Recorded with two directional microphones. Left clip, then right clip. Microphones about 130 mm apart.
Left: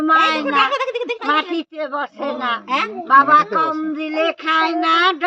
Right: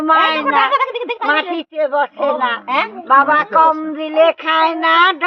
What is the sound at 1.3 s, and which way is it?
Speech, 25° left (ahead or behind).